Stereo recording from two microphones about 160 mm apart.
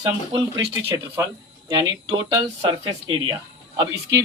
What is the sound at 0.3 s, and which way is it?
A man's voice, 20° right (ahead or behind).